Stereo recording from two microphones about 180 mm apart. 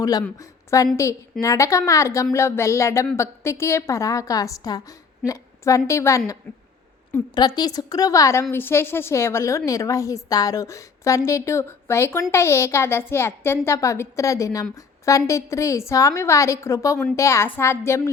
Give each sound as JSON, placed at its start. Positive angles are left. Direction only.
{"t": 0.0, "sound": "a woman's voice", "side_deg": 20}
{"t": 7.3, "sound": "a woman's voice", "side_deg": 25}